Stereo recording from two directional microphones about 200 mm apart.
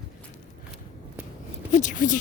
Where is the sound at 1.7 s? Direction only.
40° left (ahead or behind).